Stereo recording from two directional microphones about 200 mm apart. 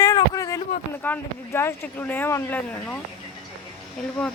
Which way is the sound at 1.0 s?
10° left (ahead or behind).